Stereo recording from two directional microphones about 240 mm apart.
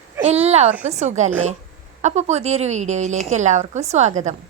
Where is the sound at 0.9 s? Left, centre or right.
Right.